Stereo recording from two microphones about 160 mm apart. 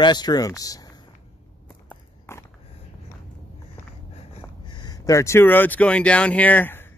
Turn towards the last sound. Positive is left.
turn(degrees=15)  # may be behind; listen again after turning